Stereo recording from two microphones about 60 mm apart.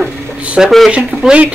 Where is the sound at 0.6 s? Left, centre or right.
Centre.